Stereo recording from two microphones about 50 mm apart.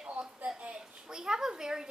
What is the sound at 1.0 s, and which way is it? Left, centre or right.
Speech, centre.